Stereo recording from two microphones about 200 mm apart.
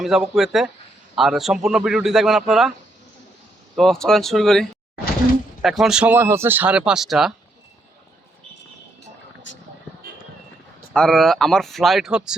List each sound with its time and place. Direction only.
0.0 s speech: centre (ahead or behind)
3.8 s speech: centre (ahead or behind)
9.5 s vehicle: 65° left (ahead or behind)
10.9 s speech: centre (ahead or behind)